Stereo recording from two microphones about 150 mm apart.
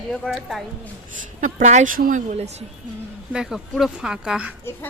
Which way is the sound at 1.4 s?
55° right (ahead or behind).